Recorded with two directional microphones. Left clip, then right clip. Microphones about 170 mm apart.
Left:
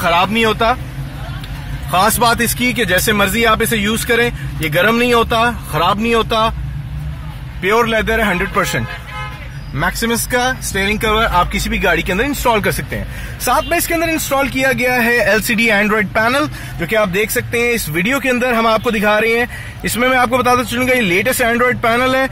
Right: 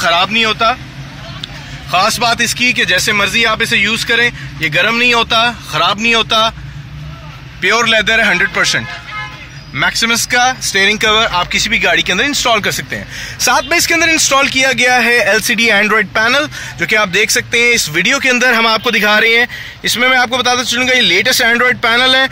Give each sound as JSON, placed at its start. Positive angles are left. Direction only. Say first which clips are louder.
{"t": 0.0, "sound": "a man's voice", "louder": "right 2 dB", "side_deg": 5}
{"t": 0.3, "sound": "speech", "louder": "right 2 dB", "side_deg": 20}
{"t": 1.9, "sound": "speech", "louder": "right 1 dB", "side_deg": 15}
{"t": 7.6, "sound": "a man's voice", "louder": "right 3 dB", "side_deg": 0}
{"t": 10.3, "sound": "speech", "louder": "right 4 dB", "side_deg": 15}
{"t": 10.7, "sound": "a man's voice", "louder": "right 5 dB", "side_deg": -5}
{"t": 11.3, "sound": "speech", "louder": "right 3 dB", "side_deg": 10}
{"t": 13.5, "sound": "a man's voice", "louder": "right 3 dB", "side_deg": -10}